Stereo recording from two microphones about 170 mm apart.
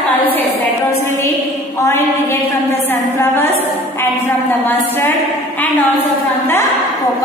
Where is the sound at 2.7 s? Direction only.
15° left (ahead or behind).